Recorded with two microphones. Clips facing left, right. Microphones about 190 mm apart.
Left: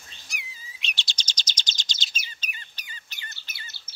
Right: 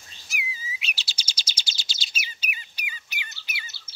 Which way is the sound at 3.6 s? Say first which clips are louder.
Right 1 dB; 50° left (ahead or behind).